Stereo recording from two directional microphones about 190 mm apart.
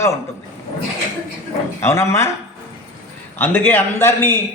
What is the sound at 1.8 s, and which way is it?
Speech, 15° left (ahead or behind).